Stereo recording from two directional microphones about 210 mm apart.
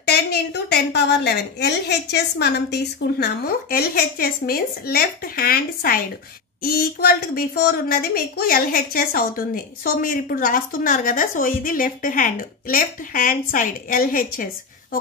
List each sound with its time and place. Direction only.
0.0 s a woman's voice: 50° left (ahead or behind)